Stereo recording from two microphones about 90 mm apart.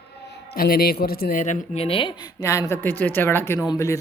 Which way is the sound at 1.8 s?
90° left.